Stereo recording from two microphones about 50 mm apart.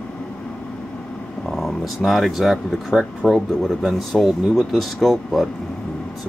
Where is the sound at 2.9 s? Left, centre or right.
Centre.